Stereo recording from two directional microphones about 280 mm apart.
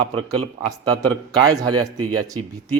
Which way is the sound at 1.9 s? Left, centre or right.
Right.